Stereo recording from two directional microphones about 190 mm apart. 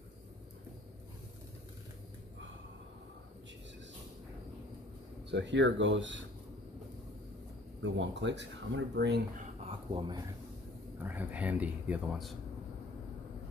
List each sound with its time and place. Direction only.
5.3 s speech: 70° right (ahead or behind)
7.8 s speech: 70° right (ahead or behind)
9.7 s speech: 25° right (ahead or behind)
11.0 s speech: 10° right (ahead or behind)